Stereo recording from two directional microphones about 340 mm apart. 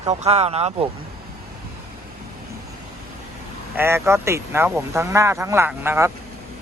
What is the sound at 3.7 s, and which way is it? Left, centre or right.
Speech, centre.